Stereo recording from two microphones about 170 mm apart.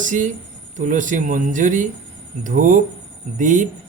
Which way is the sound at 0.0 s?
50° right (ahead or behind).